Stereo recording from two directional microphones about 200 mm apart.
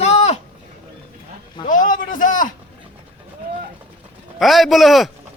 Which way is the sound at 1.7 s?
40° left (ahead or behind).